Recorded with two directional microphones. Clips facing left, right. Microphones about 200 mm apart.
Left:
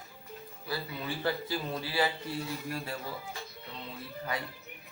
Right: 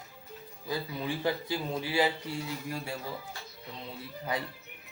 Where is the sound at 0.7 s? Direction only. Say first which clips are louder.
Right 3 dB; 15° right (ahead or behind).